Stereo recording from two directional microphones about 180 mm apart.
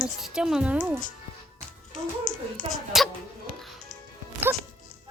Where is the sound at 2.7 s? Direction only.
Centre (ahead or behind).